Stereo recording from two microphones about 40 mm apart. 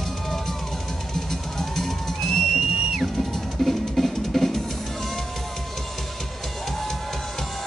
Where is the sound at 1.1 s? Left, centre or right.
Centre.